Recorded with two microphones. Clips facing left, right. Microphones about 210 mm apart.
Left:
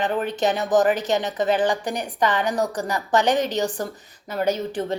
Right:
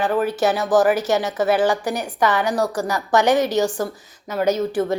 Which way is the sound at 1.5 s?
10° right (ahead or behind).